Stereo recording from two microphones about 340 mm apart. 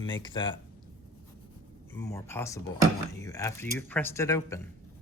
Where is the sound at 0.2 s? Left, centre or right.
Centre.